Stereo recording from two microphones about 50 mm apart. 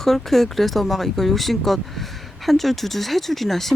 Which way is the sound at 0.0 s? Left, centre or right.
Centre.